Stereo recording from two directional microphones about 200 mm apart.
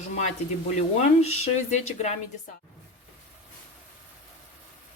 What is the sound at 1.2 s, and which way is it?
Speech, 35° left (ahead or behind).